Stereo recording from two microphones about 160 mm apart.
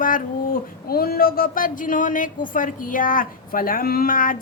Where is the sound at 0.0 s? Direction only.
60° left (ahead or behind).